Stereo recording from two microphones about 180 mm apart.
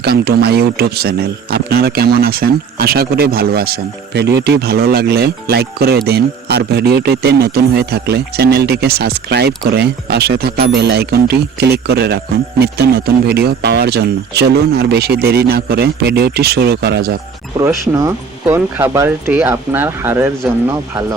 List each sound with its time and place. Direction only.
0.0 s speech: 60° right (ahead or behind)
17.6 s speech: 15° right (ahead or behind)